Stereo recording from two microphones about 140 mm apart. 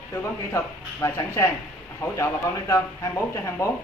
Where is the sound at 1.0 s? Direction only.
20° left (ahead or behind).